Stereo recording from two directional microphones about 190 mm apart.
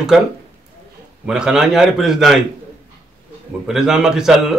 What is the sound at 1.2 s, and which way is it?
Speech, 5° right (ahead or behind).